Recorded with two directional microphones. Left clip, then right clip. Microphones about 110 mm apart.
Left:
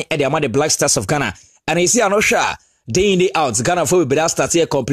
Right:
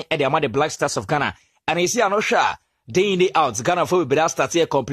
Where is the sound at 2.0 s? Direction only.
45° left (ahead or behind).